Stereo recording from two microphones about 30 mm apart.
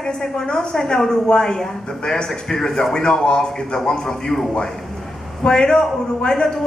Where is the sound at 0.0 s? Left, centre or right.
Left.